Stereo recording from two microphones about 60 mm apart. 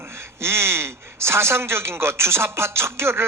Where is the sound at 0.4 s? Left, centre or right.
Right.